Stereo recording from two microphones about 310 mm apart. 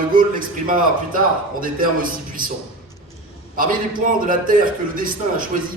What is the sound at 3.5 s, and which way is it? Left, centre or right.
A man's voice, right.